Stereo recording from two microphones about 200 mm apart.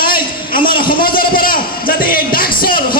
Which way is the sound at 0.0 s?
45° left (ahead or behind).